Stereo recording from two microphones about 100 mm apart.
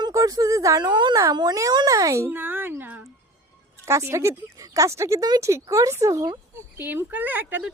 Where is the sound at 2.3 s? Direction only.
20° right (ahead or behind).